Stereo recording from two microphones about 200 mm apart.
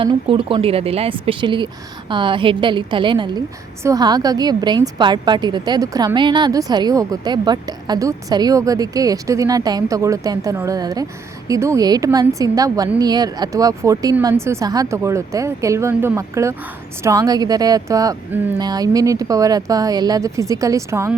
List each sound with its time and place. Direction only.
0.0 s a woman's voice: 25° right (ahead or behind)